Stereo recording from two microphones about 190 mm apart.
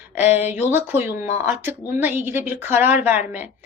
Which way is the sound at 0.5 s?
10° right (ahead or behind).